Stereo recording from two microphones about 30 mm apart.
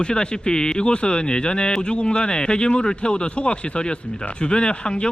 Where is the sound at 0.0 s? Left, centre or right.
Left.